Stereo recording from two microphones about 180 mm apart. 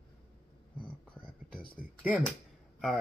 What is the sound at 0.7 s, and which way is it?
Whispering, 25° left (ahead or behind).